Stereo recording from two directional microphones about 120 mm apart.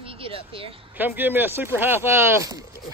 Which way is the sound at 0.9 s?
15° right (ahead or behind).